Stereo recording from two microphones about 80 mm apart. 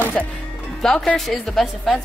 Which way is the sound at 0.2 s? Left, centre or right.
Centre.